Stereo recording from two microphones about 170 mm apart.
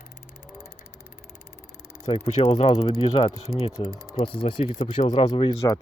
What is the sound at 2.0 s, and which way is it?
Speech, 40° left (ahead or behind).